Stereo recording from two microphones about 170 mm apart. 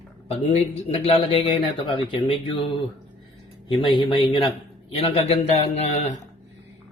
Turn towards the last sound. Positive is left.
turn(degrees=40)  # may be behind; listen again after turning